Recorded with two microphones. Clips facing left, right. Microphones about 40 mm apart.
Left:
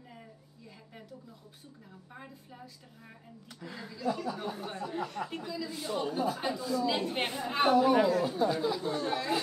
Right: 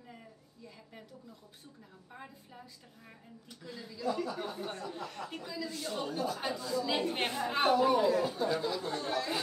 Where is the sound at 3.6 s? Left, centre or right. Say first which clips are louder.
Left 3 dB; centre.